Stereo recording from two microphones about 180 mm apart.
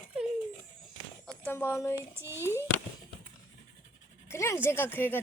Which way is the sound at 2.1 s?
15° right (ahead or behind).